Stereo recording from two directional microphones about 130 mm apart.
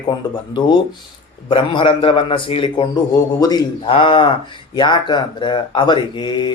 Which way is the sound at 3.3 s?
30° left (ahead or behind).